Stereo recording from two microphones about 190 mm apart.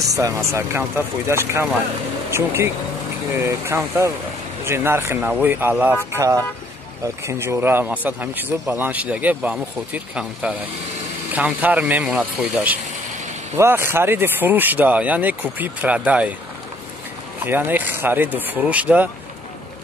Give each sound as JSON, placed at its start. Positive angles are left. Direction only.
{"t": 0.1, "sound": "speech", "side_deg": -15}
{"t": 17.5, "sound": "speech", "side_deg": -10}